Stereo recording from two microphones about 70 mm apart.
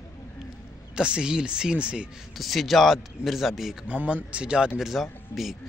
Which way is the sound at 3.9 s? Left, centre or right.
Right.